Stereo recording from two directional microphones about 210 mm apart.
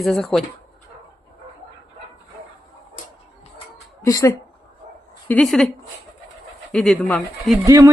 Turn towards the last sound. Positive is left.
turn(degrees=-15)  # may be behind; listen again after turning